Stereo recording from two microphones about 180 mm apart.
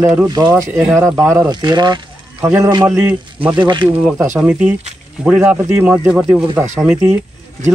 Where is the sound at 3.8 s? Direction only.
5° right (ahead or behind).